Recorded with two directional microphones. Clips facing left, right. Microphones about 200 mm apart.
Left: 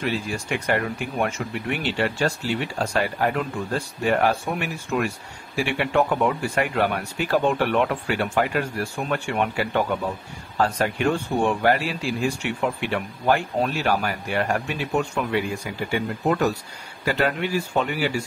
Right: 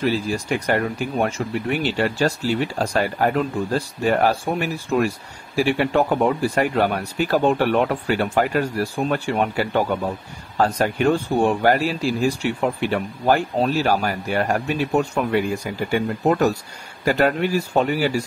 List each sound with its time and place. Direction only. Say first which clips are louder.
0.0 s speech: right 5 dB; 35° right (ahead or behind)